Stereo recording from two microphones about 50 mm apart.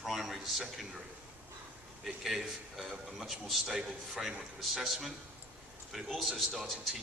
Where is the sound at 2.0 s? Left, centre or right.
Centre.